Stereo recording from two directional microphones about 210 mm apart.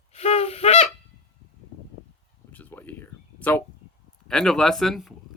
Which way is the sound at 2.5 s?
10° left (ahead or behind).